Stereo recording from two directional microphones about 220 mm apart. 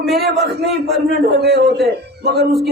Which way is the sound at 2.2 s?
45° right (ahead or behind).